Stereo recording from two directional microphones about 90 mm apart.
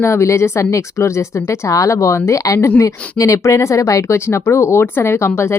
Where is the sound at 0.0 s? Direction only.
35° left (ahead or behind).